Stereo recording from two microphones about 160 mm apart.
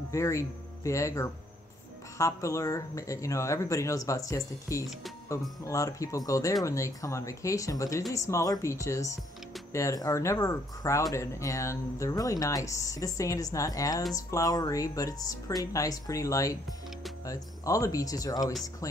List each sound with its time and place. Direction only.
0.1 s speech: 20° left (ahead or behind)